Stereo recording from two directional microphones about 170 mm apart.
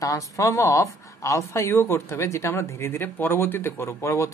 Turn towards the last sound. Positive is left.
turn(degrees=15)  # may be behind; listen again after turning